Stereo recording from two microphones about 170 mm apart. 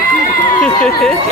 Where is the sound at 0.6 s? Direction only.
5° left (ahead or behind).